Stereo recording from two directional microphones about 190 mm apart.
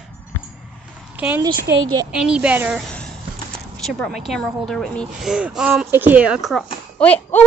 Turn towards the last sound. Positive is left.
turn(degrees=5)  # may be behind; listen again after turning